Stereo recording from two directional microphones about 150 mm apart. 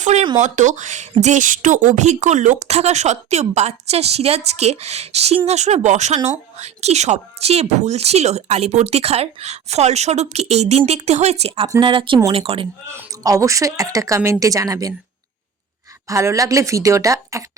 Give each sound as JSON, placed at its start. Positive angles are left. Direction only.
{"t": 0.0, "sound": "speech", "side_deg": -50}
{"t": 12.9, "sound": "a woman's voice", "side_deg": -20}
{"t": 16.0, "sound": "a woman's voice", "side_deg": -20}